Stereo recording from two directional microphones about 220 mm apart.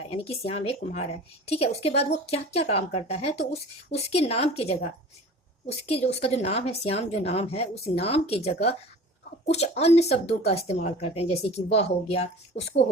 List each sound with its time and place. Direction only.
0.1 s speech: 25° left (ahead or behind)